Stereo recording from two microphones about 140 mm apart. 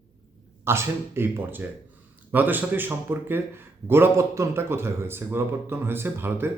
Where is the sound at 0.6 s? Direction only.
20° right (ahead or behind).